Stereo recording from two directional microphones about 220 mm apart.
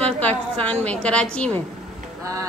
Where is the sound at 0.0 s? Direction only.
5° left (ahead or behind).